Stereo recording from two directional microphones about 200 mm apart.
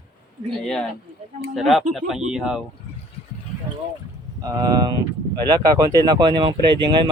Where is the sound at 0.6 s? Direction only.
5° left (ahead or behind).